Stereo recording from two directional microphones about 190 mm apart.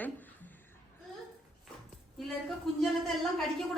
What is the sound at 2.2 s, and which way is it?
Speech, centre (ahead or behind).